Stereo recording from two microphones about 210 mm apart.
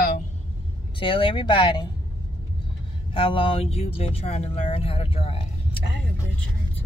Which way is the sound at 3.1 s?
25° left (ahead or behind).